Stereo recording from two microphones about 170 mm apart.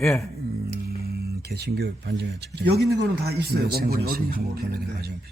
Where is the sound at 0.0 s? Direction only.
Centre (ahead or behind).